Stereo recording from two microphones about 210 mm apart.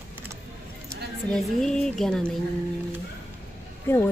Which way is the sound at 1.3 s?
Centre (ahead or behind).